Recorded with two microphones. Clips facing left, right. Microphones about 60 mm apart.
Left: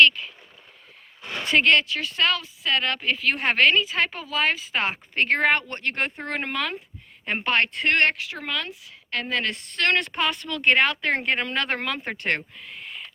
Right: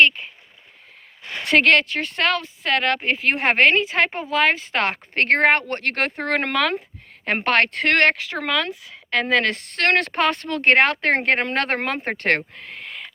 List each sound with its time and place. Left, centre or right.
0.0 s speech: right
1.5 s speech: right
4.4 s speech: right
7.3 s a woman's voice: right
9.7 s speech: right
12.5 s a sound: right